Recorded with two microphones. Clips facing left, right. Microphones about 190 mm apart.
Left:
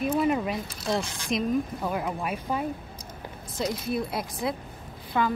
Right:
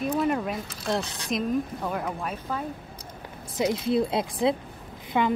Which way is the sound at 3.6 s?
20° right (ahead or behind).